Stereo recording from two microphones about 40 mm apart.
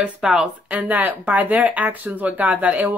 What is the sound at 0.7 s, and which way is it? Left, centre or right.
Speech, right.